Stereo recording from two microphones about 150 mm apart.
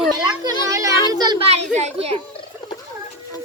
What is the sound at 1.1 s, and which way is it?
Speech, 30° right (ahead or behind).